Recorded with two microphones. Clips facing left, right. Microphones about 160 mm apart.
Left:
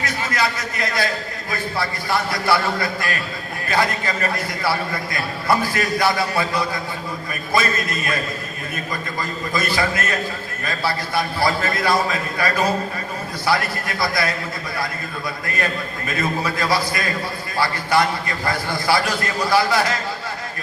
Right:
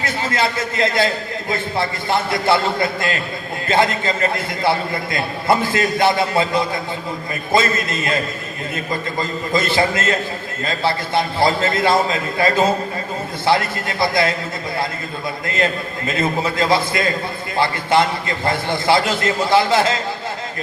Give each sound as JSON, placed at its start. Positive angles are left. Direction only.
{"t": 0.0, "sound": "a man's voice", "side_deg": -25}
{"t": 15.4, "sound": "a man's voice", "side_deg": -25}